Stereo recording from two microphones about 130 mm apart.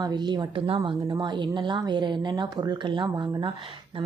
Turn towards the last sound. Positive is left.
turn(degrees=-40)  # may be behind; listen again after turning